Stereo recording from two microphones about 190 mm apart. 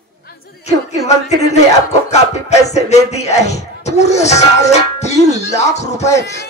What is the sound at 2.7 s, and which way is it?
Speech, 35° left (ahead or behind).